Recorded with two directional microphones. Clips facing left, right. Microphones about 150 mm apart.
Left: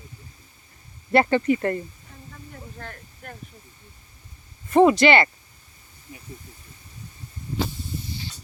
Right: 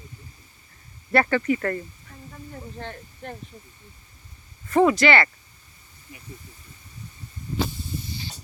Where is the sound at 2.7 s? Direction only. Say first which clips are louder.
Right 4 dB; 25° right (ahead or behind).